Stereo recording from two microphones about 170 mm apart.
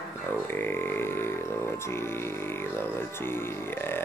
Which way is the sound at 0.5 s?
10° left (ahead or behind).